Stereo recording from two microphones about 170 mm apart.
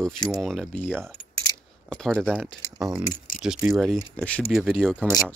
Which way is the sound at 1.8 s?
5° left (ahead or behind).